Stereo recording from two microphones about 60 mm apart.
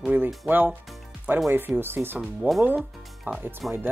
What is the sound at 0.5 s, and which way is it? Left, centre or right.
Speech, right.